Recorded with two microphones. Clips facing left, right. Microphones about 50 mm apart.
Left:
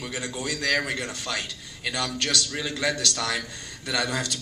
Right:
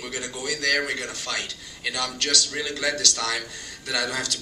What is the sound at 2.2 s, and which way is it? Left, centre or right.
A man's voice, centre.